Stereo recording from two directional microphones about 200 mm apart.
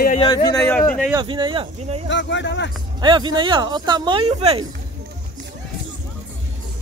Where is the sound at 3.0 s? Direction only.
25° right (ahead or behind).